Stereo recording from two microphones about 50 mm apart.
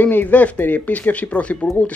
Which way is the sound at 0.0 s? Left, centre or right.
Left.